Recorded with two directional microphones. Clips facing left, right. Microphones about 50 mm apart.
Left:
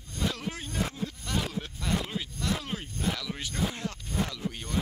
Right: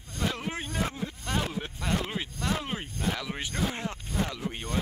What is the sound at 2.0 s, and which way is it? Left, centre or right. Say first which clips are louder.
Speech: right 1 dB; right.